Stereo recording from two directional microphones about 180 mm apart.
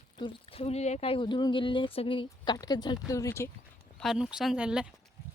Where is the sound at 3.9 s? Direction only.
Centre (ahead or behind).